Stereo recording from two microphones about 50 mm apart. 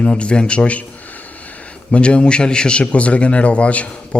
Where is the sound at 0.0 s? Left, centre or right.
Left.